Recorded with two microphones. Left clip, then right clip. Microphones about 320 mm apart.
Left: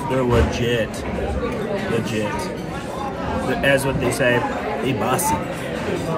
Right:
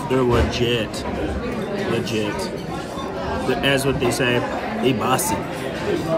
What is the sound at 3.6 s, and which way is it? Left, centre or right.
Speech, centre.